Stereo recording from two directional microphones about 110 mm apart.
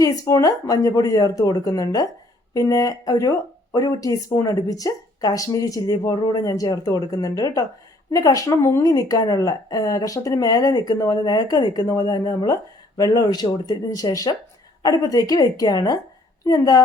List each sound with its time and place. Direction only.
0.0 s speech: 30° left (ahead or behind)